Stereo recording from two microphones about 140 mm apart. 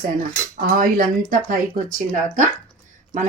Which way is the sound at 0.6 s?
80° right.